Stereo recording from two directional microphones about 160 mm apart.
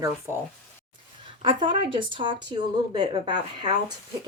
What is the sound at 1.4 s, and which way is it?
Speech, 30° right (ahead or behind).